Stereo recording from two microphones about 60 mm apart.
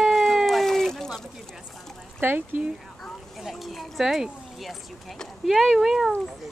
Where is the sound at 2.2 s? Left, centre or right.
Right.